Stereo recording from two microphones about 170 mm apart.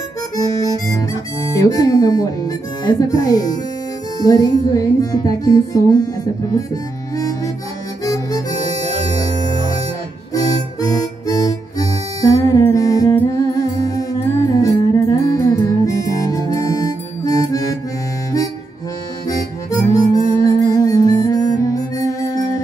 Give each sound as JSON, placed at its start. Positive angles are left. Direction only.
{"t": 0.8, "sound": "speech", "side_deg": 20}
{"t": 6.5, "sound": "harmonica", "side_deg": 20}
{"t": 8.0, "sound": "music", "side_deg": 20}
{"t": 10.3, "sound": "music", "side_deg": 20}
{"t": 17.2, "sound": "harmonica", "side_deg": 20}
{"t": 19.2, "sound": "harmonica", "side_deg": 20}